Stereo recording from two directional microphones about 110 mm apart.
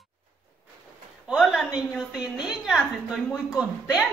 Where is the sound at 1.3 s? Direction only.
5° right (ahead or behind).